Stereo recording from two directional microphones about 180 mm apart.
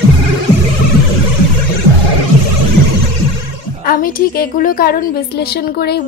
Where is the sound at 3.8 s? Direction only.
50° left (ahead or behind).